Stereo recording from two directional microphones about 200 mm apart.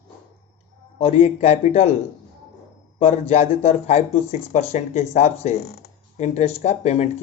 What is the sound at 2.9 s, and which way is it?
Speech, 35° left (ahead or behind).